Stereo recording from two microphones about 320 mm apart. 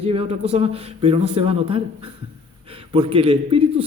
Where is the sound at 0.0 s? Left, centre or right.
Centre.